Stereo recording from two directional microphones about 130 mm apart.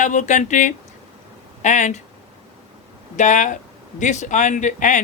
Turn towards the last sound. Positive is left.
turn(degrees=70)  # may be behind; listen again after turning